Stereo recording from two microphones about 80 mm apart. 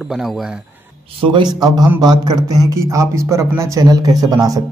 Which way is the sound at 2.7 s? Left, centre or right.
Right.